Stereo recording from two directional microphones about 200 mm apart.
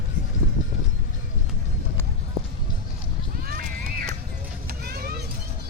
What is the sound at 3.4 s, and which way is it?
Horse, 50° right (ahead or behind).